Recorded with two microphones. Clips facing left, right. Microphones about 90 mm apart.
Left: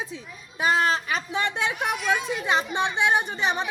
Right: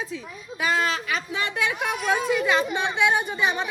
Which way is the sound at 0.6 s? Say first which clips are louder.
Left 2 dB; 35° left (ahead or behind).